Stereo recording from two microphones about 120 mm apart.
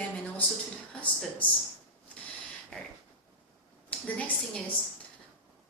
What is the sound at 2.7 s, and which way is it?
A woman's voice, 5° left (ahead or behind).